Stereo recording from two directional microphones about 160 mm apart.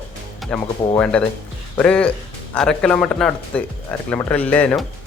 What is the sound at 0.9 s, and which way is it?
Speech, 10° left (ahead or behind).